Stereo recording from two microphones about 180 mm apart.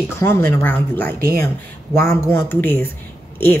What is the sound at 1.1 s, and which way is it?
Speech, 55° right (ahead or behind).